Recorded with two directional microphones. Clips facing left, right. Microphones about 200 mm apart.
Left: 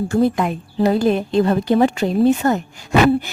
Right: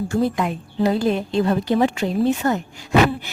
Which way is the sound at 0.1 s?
50° left (ahead or behind).